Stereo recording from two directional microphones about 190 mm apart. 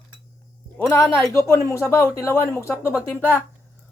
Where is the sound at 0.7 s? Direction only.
5° left (ahead or behind).